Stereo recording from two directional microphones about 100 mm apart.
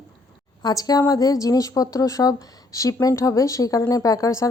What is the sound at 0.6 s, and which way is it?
A woman's voice, 40° left (ahead or behind).